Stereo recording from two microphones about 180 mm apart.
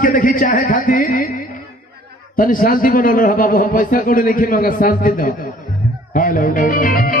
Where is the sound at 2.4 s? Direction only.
50° left (ahead or behind).